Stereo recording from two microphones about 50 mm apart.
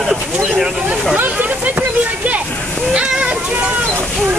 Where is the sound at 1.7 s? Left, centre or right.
Right.